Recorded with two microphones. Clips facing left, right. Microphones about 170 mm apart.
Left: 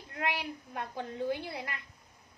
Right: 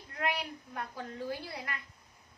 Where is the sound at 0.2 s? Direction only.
25° left (ahead or behind).